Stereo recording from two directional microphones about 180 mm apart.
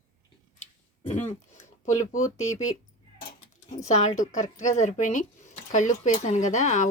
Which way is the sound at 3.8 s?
40° left (ahead or behind).